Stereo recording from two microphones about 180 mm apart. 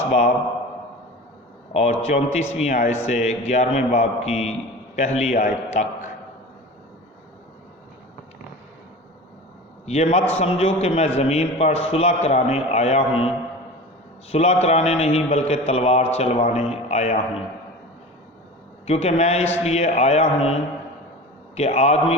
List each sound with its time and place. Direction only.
0.1 s a man's voice: 40° left (ahead or behind)
1.7 s a man's voice: 40° left (ahead or behind)
9.8 s a man's voice: 40° left (ahead or behind)
14.3 s a man's voice: 35° left (ahead or behind)
18.9 s a man's voice: 35° left (ahead or behind)